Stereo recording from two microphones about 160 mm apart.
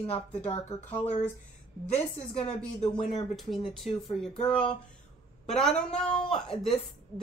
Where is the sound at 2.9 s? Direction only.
30° left (ahead or behind).